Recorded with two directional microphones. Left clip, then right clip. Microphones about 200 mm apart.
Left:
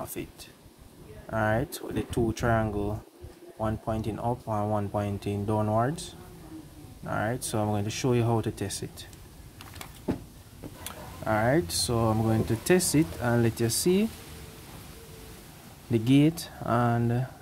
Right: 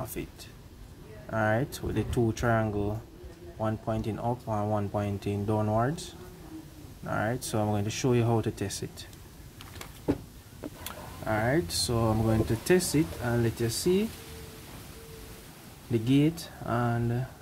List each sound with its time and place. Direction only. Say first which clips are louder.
0.0 s speech: even; 5° left (ahead or behind)
1.3 s speech: even; centre (ahead or behind)
10.8 s speech: left 4 dB; 15° left (ahead or behind)
15.9 s speech: left 3 dB; 20° left (ahead or behind)